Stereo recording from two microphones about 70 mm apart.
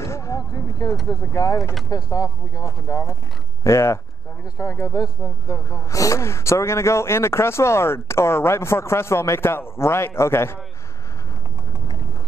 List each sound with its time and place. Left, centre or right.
0.0 s a sound: left
1.0 s speech: left
1.6 s speech: centre
1.9 s speech: left